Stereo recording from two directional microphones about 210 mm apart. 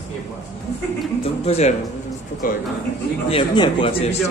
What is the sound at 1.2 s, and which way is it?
Speech, 30° left (ahead or behind).